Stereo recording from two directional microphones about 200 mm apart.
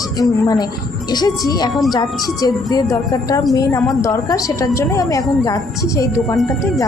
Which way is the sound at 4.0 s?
15° left (ahead or behind).